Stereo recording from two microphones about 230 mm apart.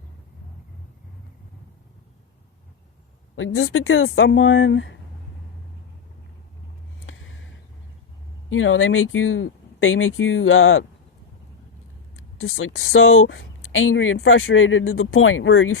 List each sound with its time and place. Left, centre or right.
3.3 s speech: left
7.0 s a sound: left
8.4 s speech: left
12.1 s speech: left